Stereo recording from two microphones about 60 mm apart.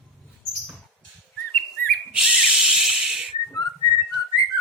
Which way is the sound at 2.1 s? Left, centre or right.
Centre.